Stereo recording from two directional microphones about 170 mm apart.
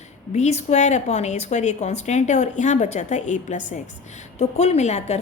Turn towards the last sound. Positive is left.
turn(degrees=40)  # may be behind; listen again after turning